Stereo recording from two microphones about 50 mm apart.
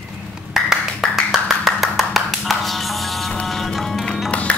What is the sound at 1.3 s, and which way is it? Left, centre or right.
Music, centre.